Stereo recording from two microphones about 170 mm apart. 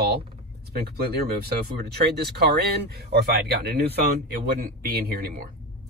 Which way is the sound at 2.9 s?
70° right (ahead or behind).